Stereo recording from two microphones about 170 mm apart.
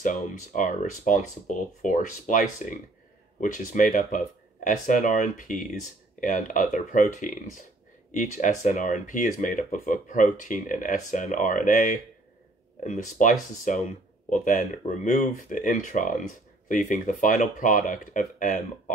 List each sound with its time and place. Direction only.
0.0 s speech: 45° left (ahead or behind)